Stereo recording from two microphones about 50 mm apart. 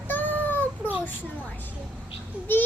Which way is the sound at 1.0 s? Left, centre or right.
Left.